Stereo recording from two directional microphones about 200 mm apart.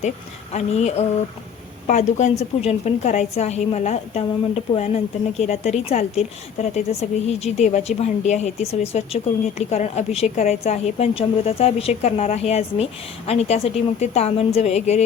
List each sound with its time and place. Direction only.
0.5 s a woman's voice: 35° left (ahead or behind)